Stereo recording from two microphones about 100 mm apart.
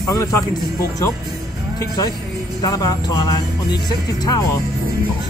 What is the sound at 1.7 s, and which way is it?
Speech, 40° left (ahead or behind).